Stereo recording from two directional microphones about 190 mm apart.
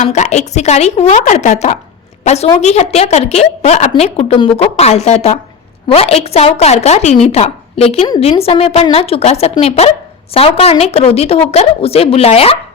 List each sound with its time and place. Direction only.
0.0 s a woman's voice: 35° left (ahead or behind)